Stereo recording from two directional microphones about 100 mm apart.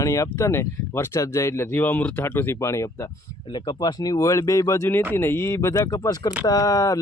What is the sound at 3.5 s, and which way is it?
Speech, 45° left (ahead or behind).